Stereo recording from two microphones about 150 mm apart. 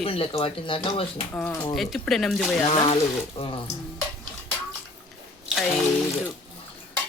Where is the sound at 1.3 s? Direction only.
5° left (ahead or behind).